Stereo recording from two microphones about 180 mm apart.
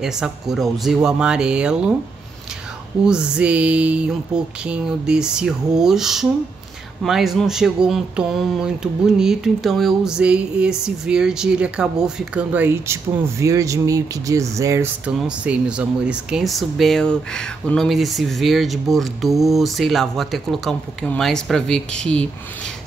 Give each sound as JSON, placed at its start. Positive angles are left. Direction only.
{"t": 0.0, "sound": "speech", "side_deg": -5}
{"t": 3.1, "sound": "speech", "side_deg": -5}
{"t": 15.0, "sound": "speech", "side_deg": -5}